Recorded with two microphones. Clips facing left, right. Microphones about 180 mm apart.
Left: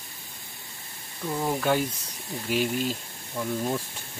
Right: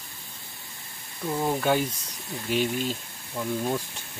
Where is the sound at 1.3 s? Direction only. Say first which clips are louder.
Right 1 dB; 15° right (ahead or behind).